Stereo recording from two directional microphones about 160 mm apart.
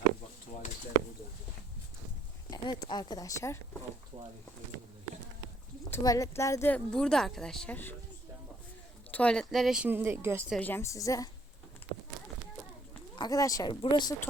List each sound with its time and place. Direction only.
2.5 s speech: 25° left (ahead or behind)
4.1 s speech: 30° right (ahead or behind)
5.9 s a woman's voice: 20° left (ahead or behind)
9.1 s speech: 5° left (ahead or behind); by 10.4 s 15° right (ahead or behind)
10.6 s speech: 15° left (ahead or behind)
13.1 s speech: 25° left (ahead or behind)